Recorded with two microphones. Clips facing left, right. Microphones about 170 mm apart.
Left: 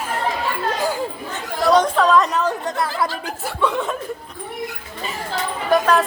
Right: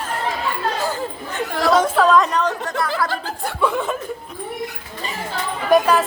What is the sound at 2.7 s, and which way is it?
Chatter, 25° left (ahead or behind).